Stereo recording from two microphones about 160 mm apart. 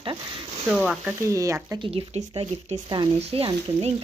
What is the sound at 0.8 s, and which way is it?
Speech, centre (ahead or behind).